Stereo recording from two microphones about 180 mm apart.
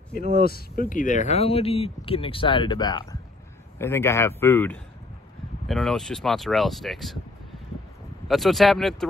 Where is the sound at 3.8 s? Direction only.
15° left (ahead or behind).